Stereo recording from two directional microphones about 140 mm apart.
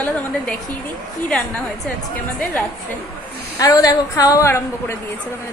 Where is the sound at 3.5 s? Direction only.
25° left (ahead or behind).